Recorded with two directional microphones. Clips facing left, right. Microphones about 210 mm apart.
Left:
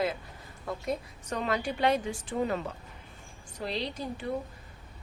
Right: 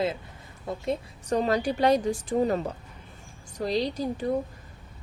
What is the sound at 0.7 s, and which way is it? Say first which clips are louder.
A woman's voice: right 3 dB; 30° right (ahead or behind).